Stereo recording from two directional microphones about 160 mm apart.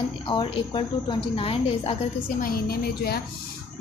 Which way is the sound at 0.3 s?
30° left (ahead or behind).